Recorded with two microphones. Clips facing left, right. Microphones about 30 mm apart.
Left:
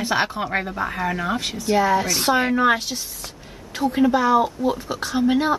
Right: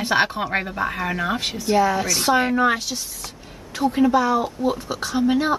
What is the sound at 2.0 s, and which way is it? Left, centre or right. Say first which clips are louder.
Speech: right 1 dB; centre.